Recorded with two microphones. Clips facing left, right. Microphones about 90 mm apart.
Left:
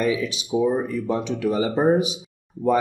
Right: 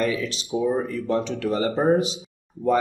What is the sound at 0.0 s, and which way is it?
Speech, 10° left (ahead or behind).